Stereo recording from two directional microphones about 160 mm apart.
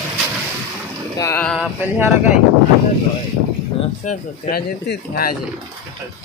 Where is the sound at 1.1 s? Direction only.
20° left (ahead or behind).